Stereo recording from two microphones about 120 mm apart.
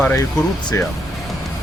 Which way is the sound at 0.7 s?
25° left (ahead or behind).